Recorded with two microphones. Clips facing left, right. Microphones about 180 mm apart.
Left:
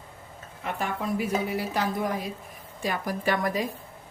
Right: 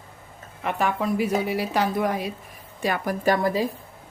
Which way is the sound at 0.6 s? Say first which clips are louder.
Right 5 dB; 75° right (ahead or behind).